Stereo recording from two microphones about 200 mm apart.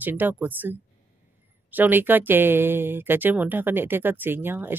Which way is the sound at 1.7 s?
10° right (ahead or behind).